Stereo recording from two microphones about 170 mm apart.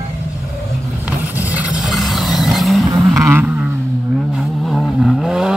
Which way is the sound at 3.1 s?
15° right (ahead or behind).